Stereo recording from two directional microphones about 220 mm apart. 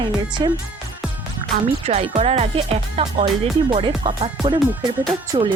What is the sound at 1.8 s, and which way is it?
Speech, 30° right (ahead or behind).